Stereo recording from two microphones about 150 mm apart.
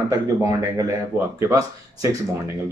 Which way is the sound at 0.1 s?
20° right (ahead or behind).